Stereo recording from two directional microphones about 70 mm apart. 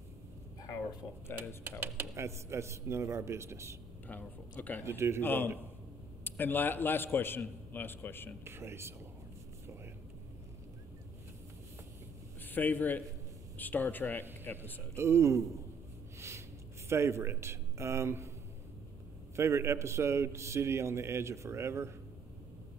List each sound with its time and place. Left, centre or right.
1.6 s a man's voice: right
4.1 s speech: left
4.8 s a man's voice: right
5.2 s a man's voice: left
8.5 s a man's voice: right
12.4 s a man's voice: left
15.0 s a man's voice: right
16.2 s a sound: right
16.9 s a man's voice: right
19.3 s a man's voice: right